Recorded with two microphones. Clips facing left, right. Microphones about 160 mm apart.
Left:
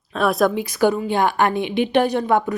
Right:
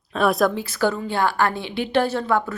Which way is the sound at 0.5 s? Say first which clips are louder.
Left 4 dB; 15° left (ahead or behind).